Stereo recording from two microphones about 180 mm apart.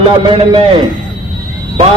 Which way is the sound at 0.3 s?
30° right (ahead or behind).